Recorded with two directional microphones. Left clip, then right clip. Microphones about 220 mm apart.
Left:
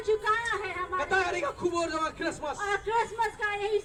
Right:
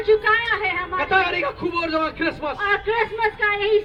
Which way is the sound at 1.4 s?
35° left (ahead or behind).